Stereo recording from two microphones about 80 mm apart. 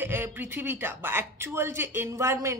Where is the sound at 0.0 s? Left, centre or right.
Right.